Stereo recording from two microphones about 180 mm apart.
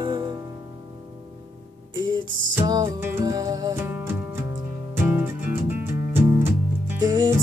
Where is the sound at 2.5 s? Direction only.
20° right (ahead or behind).